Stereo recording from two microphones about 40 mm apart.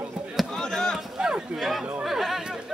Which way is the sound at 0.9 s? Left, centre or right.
Centre.